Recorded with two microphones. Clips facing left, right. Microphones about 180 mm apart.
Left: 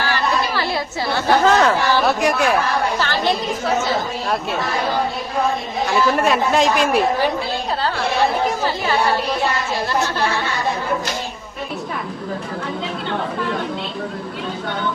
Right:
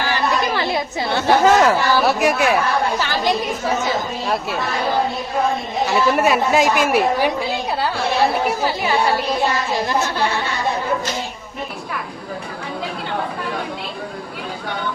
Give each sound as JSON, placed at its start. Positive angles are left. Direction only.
{"t": 0.0, "sound": "chatter", "side_deg": -15}
{"t": 1.5, "sound": "a woman's voice", "side_deg": -5}
{"t": 5.8, "sound": "a woman's voice", "side_deg": 0}
{"t": 8.4, "sound": "a woman's voice", "side_deg": -10}